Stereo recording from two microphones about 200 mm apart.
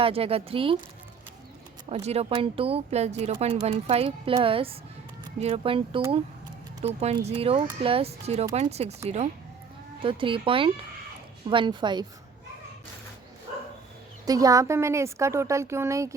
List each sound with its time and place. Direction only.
0.0 s speech: 30° right (ahead or behind)
1.9 s speech: 35° right (ahead or behind)
14.3 s a woman's voice: 15° right (ahead or behind)